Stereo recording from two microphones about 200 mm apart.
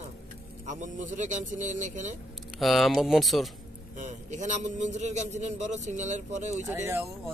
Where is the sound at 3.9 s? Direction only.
40° right (ahead or behind).